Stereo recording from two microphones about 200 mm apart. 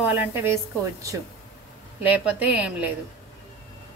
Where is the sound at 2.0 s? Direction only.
5° right (ahead or behind).